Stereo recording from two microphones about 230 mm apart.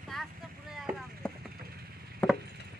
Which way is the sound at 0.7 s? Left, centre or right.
Centre.